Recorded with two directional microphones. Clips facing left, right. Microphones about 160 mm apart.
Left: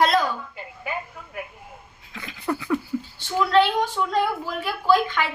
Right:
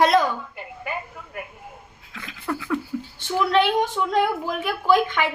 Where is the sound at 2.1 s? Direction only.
Centre (ahead or behind).